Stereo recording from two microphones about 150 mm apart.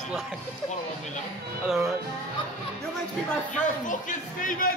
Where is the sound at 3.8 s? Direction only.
60° left (ahead or behind).